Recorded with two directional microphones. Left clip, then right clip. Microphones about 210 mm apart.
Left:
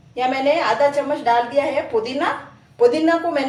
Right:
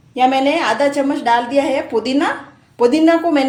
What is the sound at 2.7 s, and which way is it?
Speech, 50° right (ahead or behind).